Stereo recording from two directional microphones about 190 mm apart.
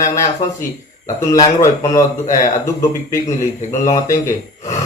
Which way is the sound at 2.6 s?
15° left (ahead or behind).